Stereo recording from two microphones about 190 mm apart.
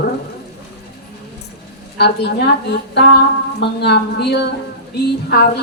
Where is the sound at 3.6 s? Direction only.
60° left (ahead or behind).